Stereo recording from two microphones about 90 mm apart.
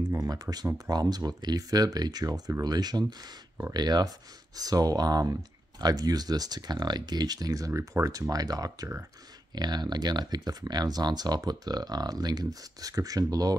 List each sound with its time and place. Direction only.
0.1 s speech: 40° right (ahead or behind)